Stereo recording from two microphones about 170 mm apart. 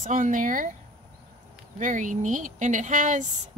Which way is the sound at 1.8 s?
50° right (ahead or behind).